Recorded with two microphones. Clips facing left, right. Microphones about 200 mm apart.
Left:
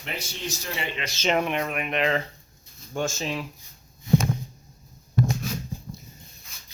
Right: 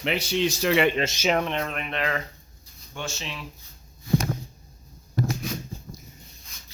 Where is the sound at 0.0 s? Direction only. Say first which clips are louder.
Right 10 dB; 80° right.